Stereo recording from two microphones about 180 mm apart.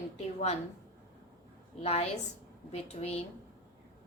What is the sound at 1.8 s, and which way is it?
A woman's voice, 35° left (ahead or behind).